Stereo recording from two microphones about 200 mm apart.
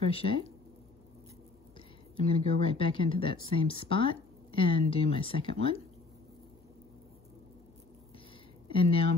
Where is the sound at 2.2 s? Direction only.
30° left (ahead or behind).